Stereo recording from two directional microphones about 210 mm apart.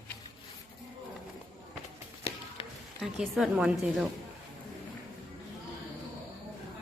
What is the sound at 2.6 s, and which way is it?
Music, 25° left (ahead or behind).